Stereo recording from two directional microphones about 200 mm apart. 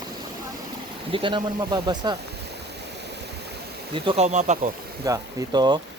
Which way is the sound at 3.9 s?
30° right (ahead or behind).